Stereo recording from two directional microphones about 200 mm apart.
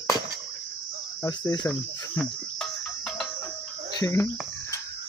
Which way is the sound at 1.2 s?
20° left (ahead or behind).